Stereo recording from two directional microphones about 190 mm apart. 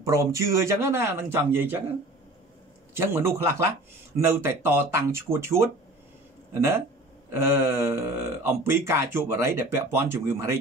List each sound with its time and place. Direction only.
0.0 s speech: 15° right (ahead or behind)
2.9 s speech: 15° right (ahead or behind)
7.3 s speech: 15° right (ahead or behind)